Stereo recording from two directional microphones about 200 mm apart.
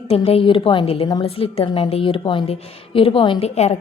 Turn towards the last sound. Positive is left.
turn(degrees=30)  # may be behind; listen again after turning